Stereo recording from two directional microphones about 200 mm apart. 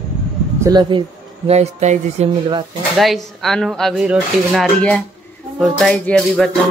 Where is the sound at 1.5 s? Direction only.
35° right (ahead or behind).